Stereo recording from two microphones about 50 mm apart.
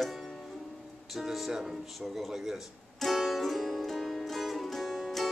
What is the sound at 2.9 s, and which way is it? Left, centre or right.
Music, centre.